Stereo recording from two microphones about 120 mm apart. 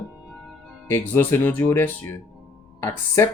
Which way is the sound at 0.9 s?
15° left (ahead or behind).